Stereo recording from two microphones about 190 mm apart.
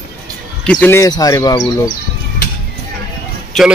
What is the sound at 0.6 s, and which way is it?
Speech, 10° left (ahead or behind).